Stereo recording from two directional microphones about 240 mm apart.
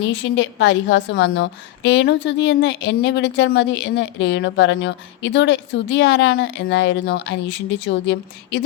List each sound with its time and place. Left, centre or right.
0.1 s a woman's voice: left